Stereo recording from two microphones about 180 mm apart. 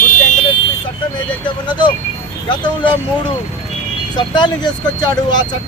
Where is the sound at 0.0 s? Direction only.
40° left (ahead or behind).